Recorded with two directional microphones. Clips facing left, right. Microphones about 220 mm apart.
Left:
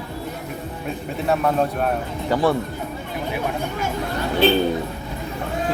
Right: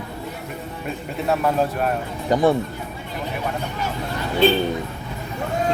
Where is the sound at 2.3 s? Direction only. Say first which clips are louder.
Right 2 dB; 20° right (ahead or behind).